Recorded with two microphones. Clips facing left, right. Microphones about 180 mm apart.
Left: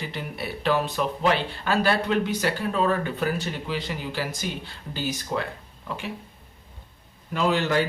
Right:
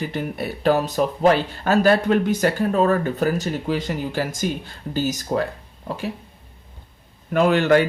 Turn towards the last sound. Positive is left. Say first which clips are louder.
# right 7 dB
turn(degrees=-60)  # may be behind; listen again after turning